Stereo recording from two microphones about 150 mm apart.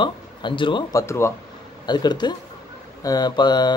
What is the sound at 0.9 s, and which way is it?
Speech, 20° left (ahead or behind).